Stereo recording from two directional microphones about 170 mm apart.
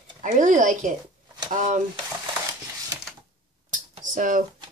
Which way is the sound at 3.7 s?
50° right (ahead or behind).